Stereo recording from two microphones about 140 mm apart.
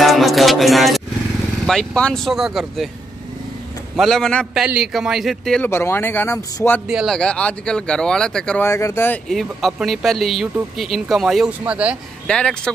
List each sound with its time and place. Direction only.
0.0 s music: centre (ahead or behind)
1.7 s speech: 5° left (ahead or behind)
3.9 s speech: centre (ahead or behind)
4.6 s speech: 5° right (ahead or behind)
5.7 s speech: 15° left (ahead or behind)
6.9 s speech: 5° right (ahead or behind)
7.2 s speech: 10° left (ahead or behind)
8.6 s speech: 20° left (ahead or behind)
9.3 s speech: centre (ahead or behind)
12.3 s speech: 5° left (ahead or behind)